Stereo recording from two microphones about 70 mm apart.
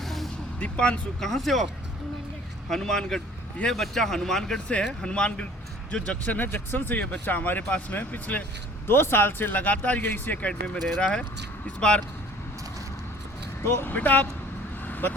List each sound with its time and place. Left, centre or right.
0.0 s vehicle: centre
0.6 s speech: centre
1.3 s speech: centre
2.6 s speech: centre; by 8.4 s left
8.9 s speech: left; by 12.0 s centre
13.6 s speech: left
13.9 s speech: left
14.8 s vehicle: left